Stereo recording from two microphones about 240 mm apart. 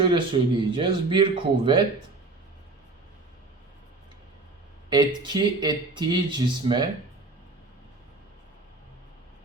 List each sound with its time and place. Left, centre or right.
0.0 s speech: right
4.9 s speech: centre